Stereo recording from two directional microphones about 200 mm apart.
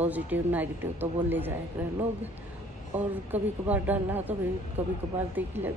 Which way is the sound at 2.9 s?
10° right (ahead or behind).